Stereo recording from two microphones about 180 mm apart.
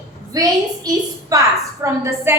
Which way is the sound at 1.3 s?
20° right (ahead or behind).